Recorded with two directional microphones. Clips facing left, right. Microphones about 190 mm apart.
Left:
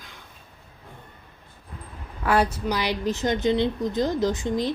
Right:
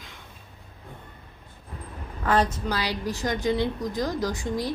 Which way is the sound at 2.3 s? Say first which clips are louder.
Left 1 dB; 10° left (ahead or behind).